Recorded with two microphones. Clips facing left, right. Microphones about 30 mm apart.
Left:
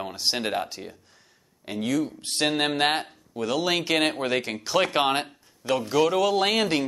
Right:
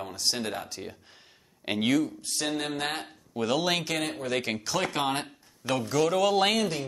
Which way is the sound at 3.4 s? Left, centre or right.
Centre.